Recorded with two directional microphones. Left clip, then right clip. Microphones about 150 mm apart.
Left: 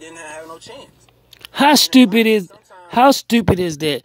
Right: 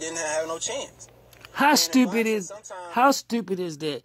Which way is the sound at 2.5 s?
35° right (ahead or behind).